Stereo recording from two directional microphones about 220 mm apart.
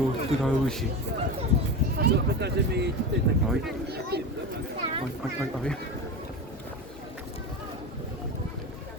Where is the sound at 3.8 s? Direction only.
45° right (ahead or behind).